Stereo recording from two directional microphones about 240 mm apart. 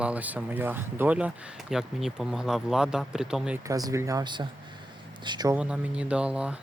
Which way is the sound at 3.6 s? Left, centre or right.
Centre.